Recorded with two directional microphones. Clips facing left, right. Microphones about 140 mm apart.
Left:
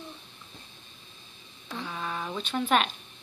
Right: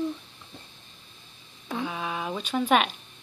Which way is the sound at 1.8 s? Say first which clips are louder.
Right 1 dB; 10° right (ahead or behind).